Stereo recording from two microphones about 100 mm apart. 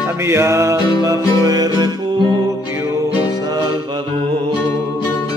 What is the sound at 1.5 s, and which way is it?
Music, 40° right (ahead or behind).